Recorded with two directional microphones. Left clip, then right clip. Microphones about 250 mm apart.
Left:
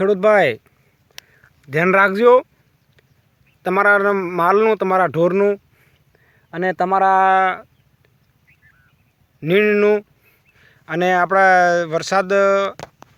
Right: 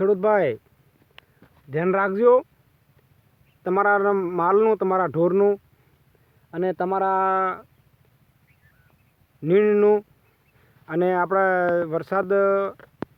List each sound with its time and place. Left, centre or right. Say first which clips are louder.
0.0 s speech: left 6 dB; centre
1.7 s speech: left 8 dB; left
3.6 s speech: left 5 dB; centre
9.4 s speech: left 3 dB; centre